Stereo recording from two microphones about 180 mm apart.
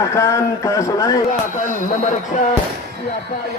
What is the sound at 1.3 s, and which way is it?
Speech, 45° left (ahead or behind).